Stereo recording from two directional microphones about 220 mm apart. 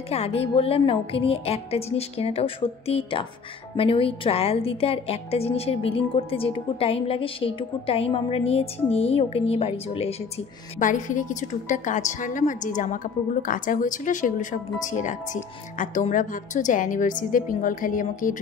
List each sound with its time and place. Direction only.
0.1 s a woman's voice: 30° left (ahead or behind)